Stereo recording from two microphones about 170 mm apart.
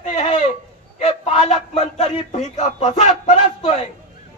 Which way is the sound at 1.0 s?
35° left (ahead or behind).